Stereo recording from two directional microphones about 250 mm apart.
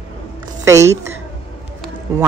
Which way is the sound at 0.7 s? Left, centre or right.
Centre.